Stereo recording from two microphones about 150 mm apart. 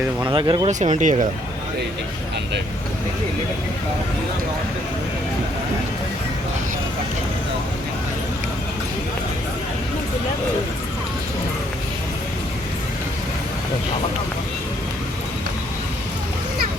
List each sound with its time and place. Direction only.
0.3 s speech: 30° right (ahead or behind)
0.7 s speech: 55° right (ahead or behind)